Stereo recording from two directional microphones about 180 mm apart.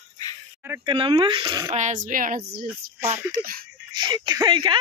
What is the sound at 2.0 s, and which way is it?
Speech, 50° right (ahead or behind).